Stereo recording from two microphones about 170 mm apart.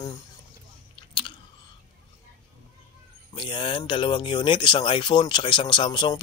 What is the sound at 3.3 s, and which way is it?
Speech, 30° left (ahead or behind).